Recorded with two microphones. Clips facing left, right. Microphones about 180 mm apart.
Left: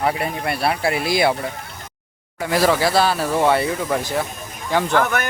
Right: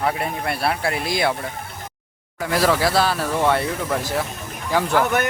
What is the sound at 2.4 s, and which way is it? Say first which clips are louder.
A man's voice: left 1 dB; centre (ahead or behind).